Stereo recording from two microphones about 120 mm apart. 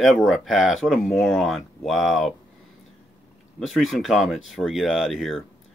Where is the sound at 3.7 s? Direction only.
Centre (ahead or behind).